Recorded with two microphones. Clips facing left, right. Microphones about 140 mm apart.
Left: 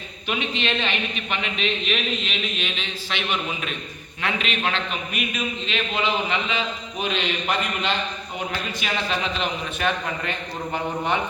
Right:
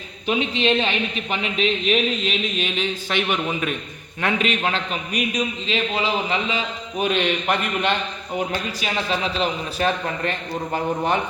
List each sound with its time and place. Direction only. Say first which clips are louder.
0.3 s a man's voice: right 6 dB; 35° right (ahead or behind)
7.0 s a man's voice: right 5 dB; 55° right (ahead or behind)
9.4 s a man's voice: right 3 dB; 35° right (ahead or behind)